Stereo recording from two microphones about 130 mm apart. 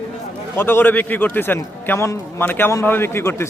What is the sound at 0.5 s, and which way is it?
A man's voice, 15° left (ahead or behind).